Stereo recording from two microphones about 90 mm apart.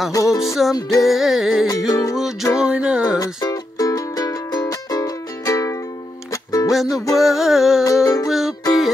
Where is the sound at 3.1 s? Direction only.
45° left (ahead or behind).